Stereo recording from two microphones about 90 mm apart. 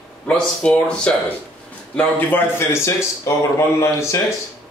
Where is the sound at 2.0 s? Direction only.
20° left (ahead or behind).